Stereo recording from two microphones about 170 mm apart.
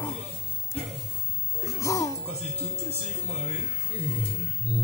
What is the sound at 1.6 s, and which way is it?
Music, 20° left (ahead or behind).